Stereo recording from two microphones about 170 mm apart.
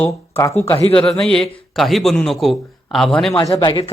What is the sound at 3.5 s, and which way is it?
Speech, 30° left (ahead or behind).